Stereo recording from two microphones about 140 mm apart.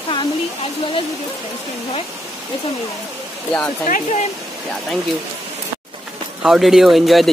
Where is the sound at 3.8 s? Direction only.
60° left (ahead or behind).